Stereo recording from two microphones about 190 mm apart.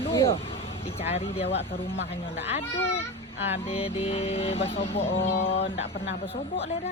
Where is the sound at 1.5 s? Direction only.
70° left (ahead or behind).